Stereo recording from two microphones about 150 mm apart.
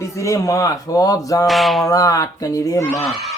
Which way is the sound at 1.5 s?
Centre (ahead or behind).